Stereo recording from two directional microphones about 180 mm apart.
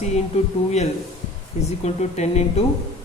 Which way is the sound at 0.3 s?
40° left (ahead or behind).